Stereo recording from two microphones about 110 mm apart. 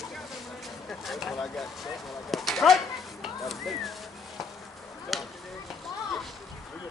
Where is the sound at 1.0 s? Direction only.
Centre (ahead or behind).